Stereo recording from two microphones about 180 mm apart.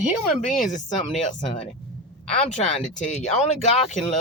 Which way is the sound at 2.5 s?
40° left (ahead or behind).